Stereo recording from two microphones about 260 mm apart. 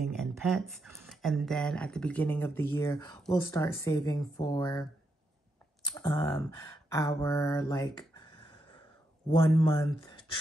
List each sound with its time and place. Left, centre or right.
0.0 s a sound: centre
0.4 s speech: centre
5.9 s speech: centre
9.6 s speech: centre